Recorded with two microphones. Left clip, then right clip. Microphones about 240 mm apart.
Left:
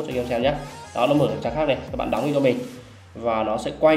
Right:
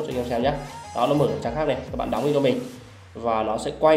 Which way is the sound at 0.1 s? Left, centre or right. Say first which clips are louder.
Left 2 dB; centre.